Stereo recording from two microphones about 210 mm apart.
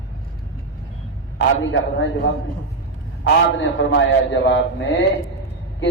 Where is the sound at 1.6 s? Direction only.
60° left (ahead or behind).